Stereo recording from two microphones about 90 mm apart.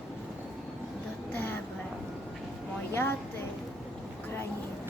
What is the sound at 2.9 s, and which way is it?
Speech, 25° left (ahead or behind).